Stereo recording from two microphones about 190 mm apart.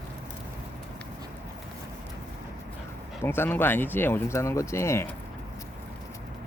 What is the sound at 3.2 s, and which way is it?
Speech, 10° left (ahead or behind).